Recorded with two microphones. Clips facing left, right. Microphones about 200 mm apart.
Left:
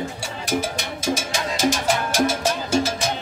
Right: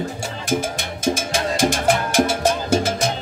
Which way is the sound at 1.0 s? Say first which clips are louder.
Right 4 dB; 50° right (ahead or behind).